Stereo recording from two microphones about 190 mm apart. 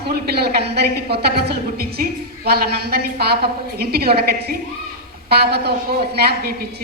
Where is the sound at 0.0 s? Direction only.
60° right (ahead or behind).